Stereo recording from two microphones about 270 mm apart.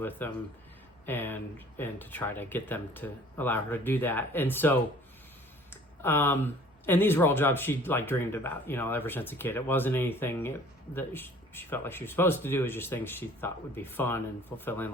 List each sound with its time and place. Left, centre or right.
0.0 s speech: centre